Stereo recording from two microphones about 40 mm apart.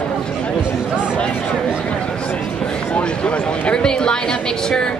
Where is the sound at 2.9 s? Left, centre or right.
Left.